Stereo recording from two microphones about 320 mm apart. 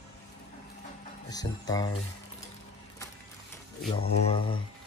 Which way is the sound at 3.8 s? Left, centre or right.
Centre.